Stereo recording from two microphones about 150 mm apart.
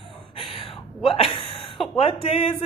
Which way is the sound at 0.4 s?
35° left (ahead or behind).